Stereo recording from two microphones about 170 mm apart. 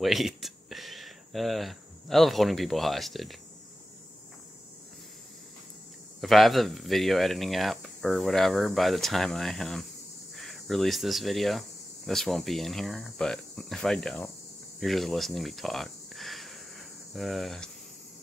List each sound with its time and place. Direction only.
0.0 s speech: centre (ahead or behind)
6.2 s speech: centre (ahead or behind)
14.8 s a sound: centre (ahead or behind)